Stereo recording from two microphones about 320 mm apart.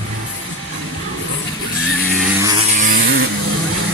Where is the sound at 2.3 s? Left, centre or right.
Centre.